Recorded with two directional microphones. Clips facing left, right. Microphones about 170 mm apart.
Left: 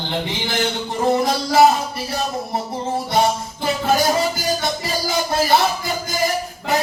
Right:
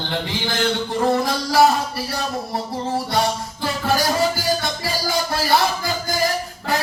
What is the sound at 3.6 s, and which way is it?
Music, 20° left (ahead or behind).